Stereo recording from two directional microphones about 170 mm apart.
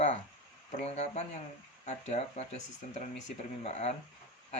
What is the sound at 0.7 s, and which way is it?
Speech, 40° left (ahead or behind).